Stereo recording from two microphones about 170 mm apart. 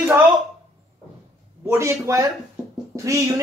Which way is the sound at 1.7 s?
15° right (ahead or behind).